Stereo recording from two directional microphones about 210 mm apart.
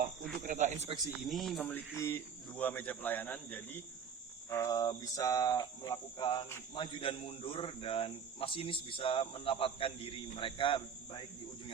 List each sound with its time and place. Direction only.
0.4 s snake: 35° right (ahead or behind)
1.2 s speech: centre (ahead or behind)
4.4 s cricket: 15° left (ahead or behind)